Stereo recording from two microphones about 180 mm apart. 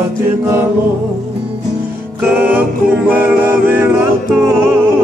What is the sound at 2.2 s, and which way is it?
Music, 10° right (ahead or behind).